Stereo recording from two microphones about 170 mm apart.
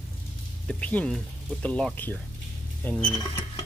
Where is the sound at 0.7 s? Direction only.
10° left (ahead or behind).